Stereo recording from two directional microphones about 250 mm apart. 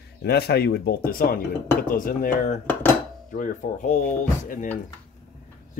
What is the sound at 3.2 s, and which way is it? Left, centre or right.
Speech, left.